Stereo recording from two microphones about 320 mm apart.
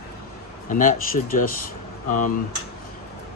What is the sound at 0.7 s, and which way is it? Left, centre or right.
Speech, left.